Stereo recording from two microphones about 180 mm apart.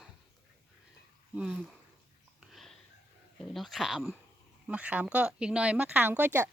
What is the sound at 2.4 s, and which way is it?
Sniff, centre (ahead or behind).